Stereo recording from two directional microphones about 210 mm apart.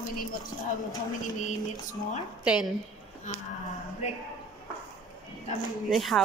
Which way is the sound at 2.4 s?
5° right (ahead or behind).